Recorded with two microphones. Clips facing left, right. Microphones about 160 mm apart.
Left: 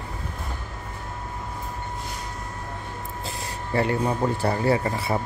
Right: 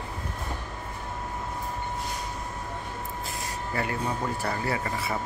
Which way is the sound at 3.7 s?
30° left (ahead or behind).